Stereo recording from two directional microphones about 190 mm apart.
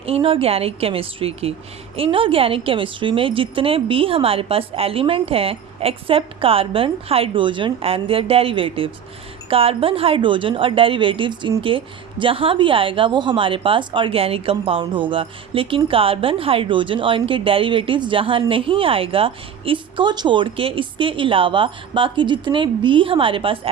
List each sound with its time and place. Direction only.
0.0 s a woman's voice: 30° right (ahead or behind)